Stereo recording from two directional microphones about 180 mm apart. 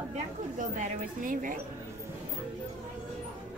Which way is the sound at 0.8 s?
50° right (ahead or behind).